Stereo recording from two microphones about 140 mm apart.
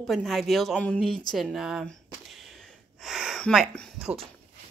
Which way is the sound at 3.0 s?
5° right (ahead or behind).